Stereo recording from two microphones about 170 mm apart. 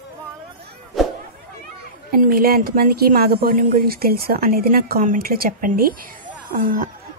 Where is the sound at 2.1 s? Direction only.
60° right (ahead or behind).